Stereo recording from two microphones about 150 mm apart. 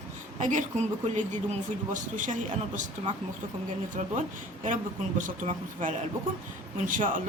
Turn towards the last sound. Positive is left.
turn(degrees=-60)  # may be behind; listen again after turning